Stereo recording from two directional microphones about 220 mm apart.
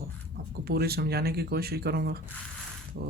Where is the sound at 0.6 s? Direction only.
45° right (ahead or behind).